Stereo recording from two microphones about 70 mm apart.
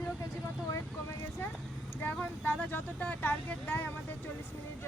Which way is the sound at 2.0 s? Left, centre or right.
Left.